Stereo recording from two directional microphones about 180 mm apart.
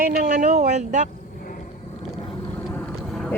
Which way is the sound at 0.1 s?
70° right (ahead or behind).